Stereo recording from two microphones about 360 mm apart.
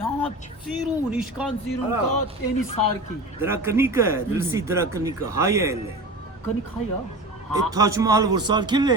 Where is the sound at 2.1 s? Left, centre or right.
Left.